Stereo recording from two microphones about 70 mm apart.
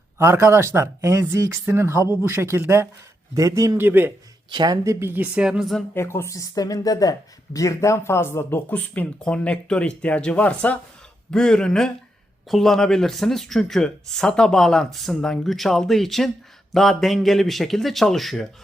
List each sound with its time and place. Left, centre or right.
0.2 s speech: right
3.3 s a man's voice: right
3.8 s speech: right
4.5 s speech: right
4.9 s speech: right; by 5.6 s centre
5.9 s speech: left
6.3 s speech: left
9.1 s speech: centre
11.3 s speech: centre